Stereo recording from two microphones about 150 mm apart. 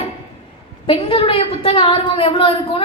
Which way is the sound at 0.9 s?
35° left (ahead or behind).